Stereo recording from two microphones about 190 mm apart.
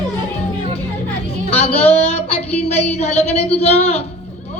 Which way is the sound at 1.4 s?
30° left (ahead or behind).